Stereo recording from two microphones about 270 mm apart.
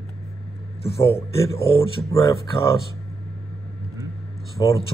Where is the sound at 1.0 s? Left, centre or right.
Centre.